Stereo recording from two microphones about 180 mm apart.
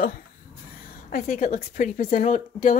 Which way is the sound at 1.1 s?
40° left (ahead or behind).